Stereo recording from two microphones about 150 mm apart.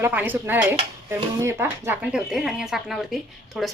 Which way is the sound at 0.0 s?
10° right (ahead or behind).